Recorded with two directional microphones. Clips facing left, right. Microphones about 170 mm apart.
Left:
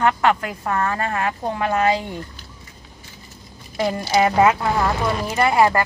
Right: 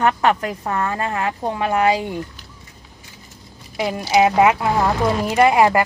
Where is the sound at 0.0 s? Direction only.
20° right (ahead or behind).